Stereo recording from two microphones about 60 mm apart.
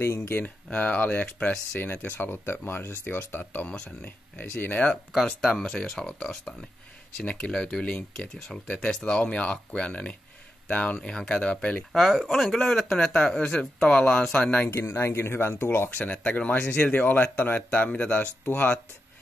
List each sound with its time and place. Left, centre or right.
0.7 s speech: left
1.2 s speech: centre
1.8 s speech: left
5.6 s speech: centre
11.0 s speech: centre
11.9 s speech: centre; by 14.7 s left
14.8 s speech: left
16.0 s speech: left